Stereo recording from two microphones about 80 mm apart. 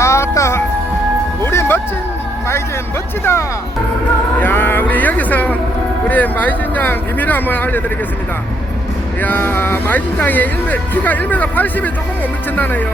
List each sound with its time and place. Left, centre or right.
0.0 s music: left
3.3 s speech: left
4.4 s a sound: left
6.1 s speech: left
9.2 s speech: left